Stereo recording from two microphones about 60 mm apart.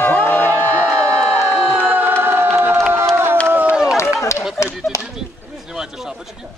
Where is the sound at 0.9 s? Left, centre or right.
Centre.